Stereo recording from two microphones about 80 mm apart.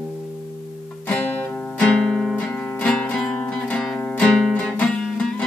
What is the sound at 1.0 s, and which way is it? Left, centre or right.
Music, centre.